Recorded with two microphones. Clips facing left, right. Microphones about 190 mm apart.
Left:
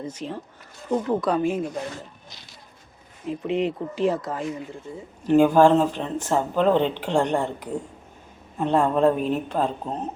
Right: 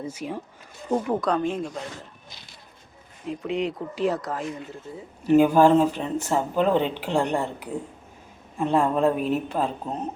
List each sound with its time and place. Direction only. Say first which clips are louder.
0.0 s speech: even; 10° right (ahead or behind)
1.2 s speech: left 2 dB; 5° left (ahead or behind)
3.2 s speech: left 2 dB; centre (ahead or behind)